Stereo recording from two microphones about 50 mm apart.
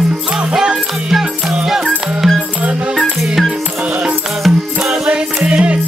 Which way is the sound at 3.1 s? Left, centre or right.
Centre.